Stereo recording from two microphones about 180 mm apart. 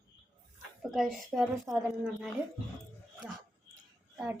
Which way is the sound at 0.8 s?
Centre (ahead or behind).